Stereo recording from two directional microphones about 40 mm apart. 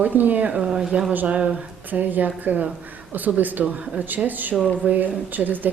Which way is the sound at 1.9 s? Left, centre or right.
Right.